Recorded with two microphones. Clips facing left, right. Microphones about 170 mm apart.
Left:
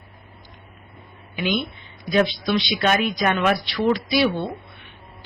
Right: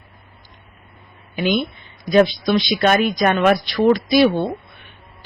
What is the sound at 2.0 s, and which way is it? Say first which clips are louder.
Speech: right 5 dB; 40° right (ahead or behind).